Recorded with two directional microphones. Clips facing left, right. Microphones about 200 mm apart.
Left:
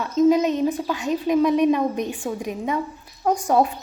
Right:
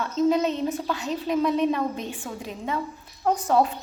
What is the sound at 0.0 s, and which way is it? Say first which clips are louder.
A woman's voice: left 5 dB; 10° left (ahead or behind).